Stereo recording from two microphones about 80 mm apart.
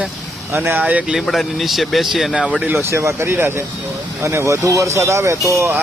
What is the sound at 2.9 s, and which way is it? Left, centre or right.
Speech, right.